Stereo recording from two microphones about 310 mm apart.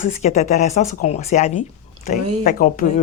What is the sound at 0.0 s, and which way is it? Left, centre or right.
Speech, left.